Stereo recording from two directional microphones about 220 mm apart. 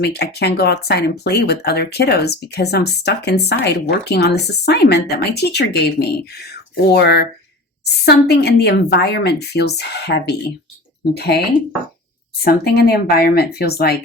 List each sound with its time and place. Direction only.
0.0 s speech: 50° left (ahead or behind)